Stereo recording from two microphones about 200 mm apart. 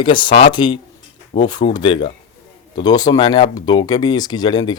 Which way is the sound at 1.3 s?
35° left (ahead or behind).